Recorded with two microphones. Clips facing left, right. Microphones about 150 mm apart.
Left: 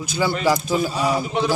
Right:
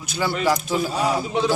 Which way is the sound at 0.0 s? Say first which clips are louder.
Left 2 dB; centre (ahead or behind).